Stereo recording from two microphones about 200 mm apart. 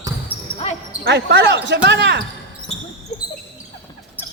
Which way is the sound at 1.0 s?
60° right (ahead or behind).